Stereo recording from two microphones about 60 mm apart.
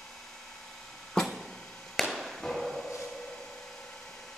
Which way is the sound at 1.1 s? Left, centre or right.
Centre.